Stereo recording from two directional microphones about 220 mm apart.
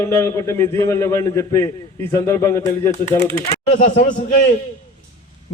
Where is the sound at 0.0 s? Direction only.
10° left (ahead or behind).